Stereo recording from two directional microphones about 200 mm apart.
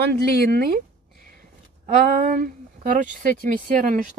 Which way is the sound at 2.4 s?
40° right (ahead or behind).